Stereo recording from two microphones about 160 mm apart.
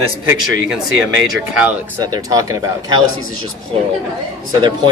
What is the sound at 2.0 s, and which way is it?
Speech, 25° right (ahead or behind).